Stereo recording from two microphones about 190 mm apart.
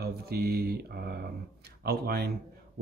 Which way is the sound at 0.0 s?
55° right (ahead or behind).